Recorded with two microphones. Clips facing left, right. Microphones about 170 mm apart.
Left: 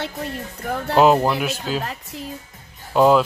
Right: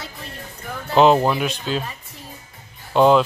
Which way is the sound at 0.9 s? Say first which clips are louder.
Right 1 dB; 5° left (ahead or behind).